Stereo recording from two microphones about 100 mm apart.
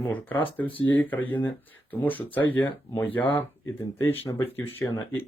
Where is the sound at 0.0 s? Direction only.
20° left (ahead or behind).